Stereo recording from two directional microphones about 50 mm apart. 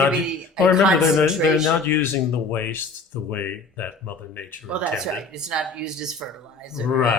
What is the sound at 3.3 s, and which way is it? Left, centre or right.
Speech, left.